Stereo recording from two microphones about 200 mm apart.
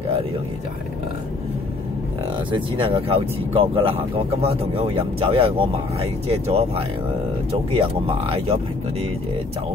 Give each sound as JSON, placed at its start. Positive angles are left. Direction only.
{"t": 2.5, "sound": "speech", "side_deg": -25}